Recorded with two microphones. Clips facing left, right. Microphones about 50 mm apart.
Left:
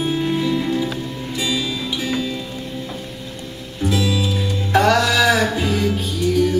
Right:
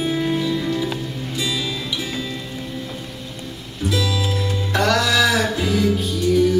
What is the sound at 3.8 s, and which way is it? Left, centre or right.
Music, left.